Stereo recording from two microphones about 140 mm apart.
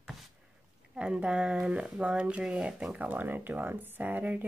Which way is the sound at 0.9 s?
5° right (ahead or behind).